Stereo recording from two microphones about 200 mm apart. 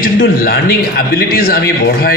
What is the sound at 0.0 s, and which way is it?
A man's voice, 45° left (ahead or behind).